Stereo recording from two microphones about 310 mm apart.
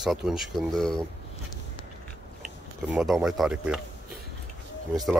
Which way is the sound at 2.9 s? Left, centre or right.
Centre.